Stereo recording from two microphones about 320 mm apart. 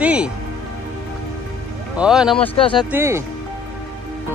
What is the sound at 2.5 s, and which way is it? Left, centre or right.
Speech, centre.